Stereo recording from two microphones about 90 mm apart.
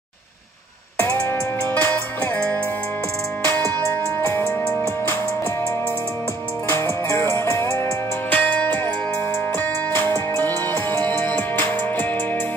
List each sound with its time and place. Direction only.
1.8 s music: 20° left (ahead or behind)
6.7 s music: 25° left (ahead or behind)
8.3 s music: 15° left (ahead or behind)